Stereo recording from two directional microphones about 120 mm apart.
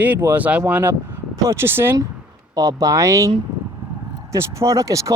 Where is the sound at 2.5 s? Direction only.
30° right (ahead or behind).